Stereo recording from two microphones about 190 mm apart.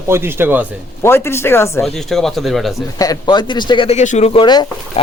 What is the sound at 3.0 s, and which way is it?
Speech, 20° left (ahead or behind).